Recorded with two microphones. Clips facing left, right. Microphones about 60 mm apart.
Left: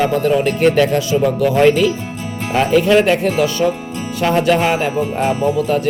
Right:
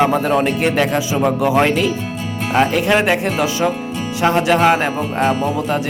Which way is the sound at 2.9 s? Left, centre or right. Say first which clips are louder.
Left 3 dB; centre.